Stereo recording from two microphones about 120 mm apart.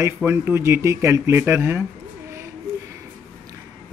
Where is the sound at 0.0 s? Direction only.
20° right (ahead or behind).